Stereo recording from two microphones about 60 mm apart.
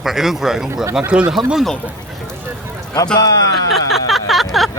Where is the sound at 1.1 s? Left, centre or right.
Centre.